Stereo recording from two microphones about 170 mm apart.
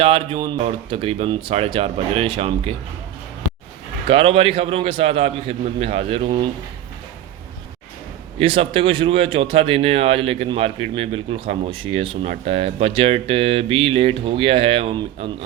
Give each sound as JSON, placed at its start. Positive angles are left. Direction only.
{"t": 0.0, "sound": "speech", "side_deg": -35}
{"t": 4.1, "sound": "speech", "side_deg": -35}
{"t": 8.4, "sound": "speech", "side_deg": -30}